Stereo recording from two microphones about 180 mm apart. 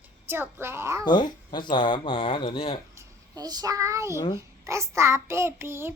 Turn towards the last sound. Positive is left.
turn(degrees=-15)  # may be behind; listen again after turning